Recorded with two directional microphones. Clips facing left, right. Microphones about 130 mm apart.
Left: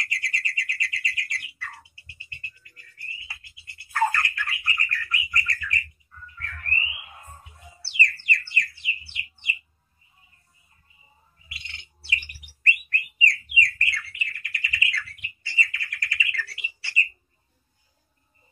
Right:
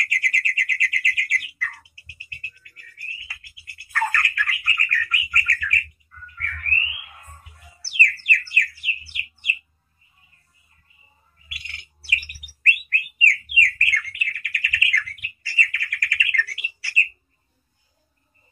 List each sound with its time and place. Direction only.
0.0 s bird: 25° left (ahead or behind)
10.9 s bird: 25° left (ahead or behind)